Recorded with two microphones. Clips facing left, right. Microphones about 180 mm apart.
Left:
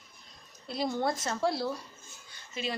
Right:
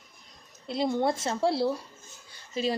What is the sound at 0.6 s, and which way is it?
A woman's voice, 25° right (ahead or behind).